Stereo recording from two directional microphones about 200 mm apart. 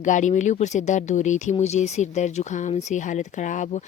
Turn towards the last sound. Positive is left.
turn(degrees=40)  # may be behind; listen again after turning